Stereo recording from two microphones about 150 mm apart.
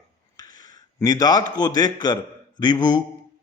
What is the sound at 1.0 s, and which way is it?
A man's voice, 25° left (ahead or behind).